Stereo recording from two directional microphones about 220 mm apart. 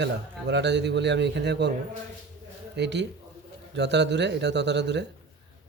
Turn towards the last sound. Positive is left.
turn(degrees=-50)  # may be behind; listen again after turning